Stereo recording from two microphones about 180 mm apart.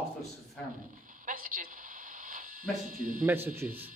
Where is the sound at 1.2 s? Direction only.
50° right (ahead or behind).